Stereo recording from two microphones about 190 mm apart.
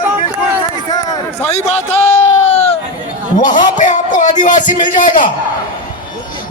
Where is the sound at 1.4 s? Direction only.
35° left (ahead or behind).